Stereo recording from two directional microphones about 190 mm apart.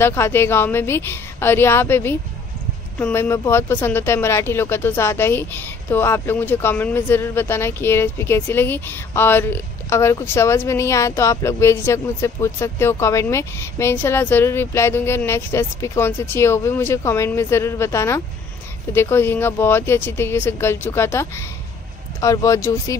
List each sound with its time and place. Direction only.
0.0 s speech: 10° left (ahead or behind)